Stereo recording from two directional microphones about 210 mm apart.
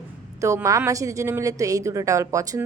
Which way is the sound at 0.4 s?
15° right (ahead or behind).